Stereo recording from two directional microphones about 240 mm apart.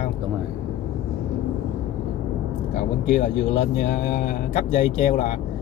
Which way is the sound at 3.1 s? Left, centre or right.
Left.